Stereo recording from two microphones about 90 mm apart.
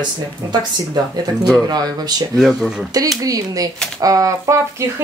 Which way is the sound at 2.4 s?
5° right (ahead or behind).